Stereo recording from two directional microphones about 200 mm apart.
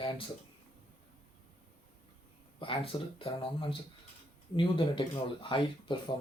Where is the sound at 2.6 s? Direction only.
25° left (ahead or behind).